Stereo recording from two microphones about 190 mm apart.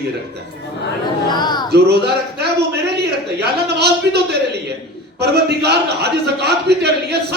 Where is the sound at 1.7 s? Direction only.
60° right (ahead or behind).